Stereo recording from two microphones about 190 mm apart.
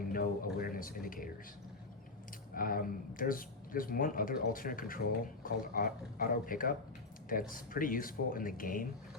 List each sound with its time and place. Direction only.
0.1 s speech: 50° left (ahead or behind)
2.6 s speech: 50° left (ahead or behind)